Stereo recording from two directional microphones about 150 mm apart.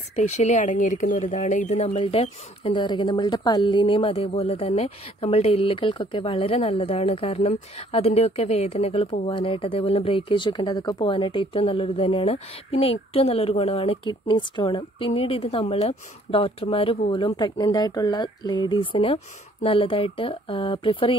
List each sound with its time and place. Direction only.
0.1 s speech: 50° left (ahead or behind); by 21.2 s 35° left (ahead or behind)